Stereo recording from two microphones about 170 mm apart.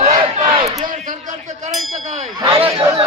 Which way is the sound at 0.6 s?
20° right (ahead or behind).